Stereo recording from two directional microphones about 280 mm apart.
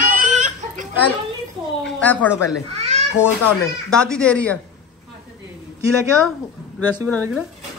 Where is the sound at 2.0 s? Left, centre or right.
Centre.